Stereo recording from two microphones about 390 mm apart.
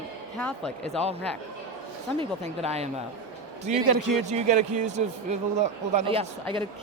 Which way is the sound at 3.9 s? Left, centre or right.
Right.